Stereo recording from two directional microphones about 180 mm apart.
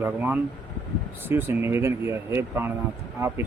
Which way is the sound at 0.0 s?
10° right (ahead or behind).